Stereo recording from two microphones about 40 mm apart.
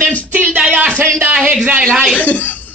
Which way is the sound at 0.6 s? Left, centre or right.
Right.